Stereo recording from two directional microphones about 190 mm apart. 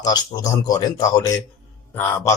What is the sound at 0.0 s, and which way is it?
Speech, 20° left (ahead or behind).